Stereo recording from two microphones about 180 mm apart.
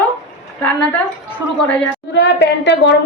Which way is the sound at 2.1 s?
75° left (ahead or behind).